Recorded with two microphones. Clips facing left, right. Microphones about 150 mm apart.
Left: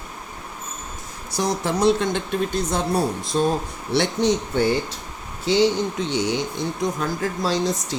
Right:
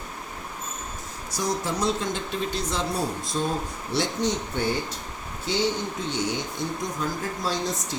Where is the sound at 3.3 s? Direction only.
75° left (ahead or behind).